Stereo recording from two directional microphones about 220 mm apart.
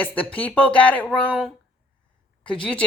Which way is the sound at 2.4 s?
5° left (ahead or behind).